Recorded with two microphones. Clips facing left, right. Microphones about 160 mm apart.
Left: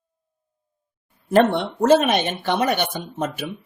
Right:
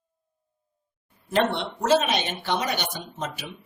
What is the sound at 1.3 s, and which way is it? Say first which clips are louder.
Speech: left 7 dB; 50° left (ahead or behind).